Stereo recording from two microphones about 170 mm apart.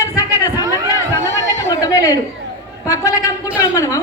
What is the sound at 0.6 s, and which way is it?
Chatter, 20° right (ahead or behind).